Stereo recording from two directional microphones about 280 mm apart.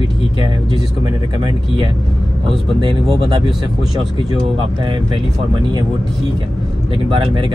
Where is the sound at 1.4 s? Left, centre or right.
Centre.